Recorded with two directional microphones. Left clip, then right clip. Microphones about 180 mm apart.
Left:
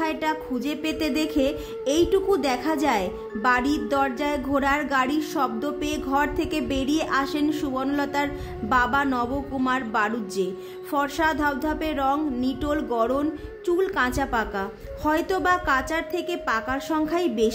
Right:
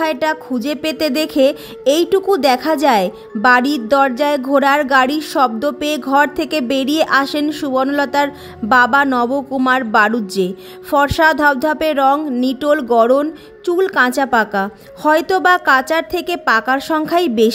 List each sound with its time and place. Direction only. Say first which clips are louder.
0.0 s speech: right 9 dB; 40° right (ahead or behind)